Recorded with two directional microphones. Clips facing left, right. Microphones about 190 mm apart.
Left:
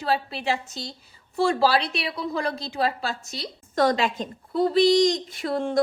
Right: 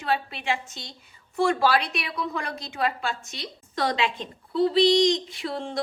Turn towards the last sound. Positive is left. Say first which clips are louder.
# left 6 dB
turn(degrees=50)  # may be behind; listen again after turning